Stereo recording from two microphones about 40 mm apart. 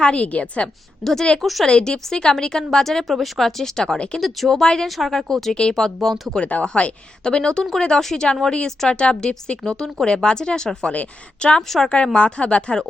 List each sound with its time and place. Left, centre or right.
0.0 s speech: left
0.3 s speech: left
1.0 s a woman's voice: centre
1.4 s a woman's voice: centre
1.6 s a woman's voice: centre
3.9 s speech: left
4.2 s a woman's voice: centre
4.6 s a woman's voice: centre
4.9 s a woman's voice: centre
6.4 s speech: left
7.3 s a woman's voice: left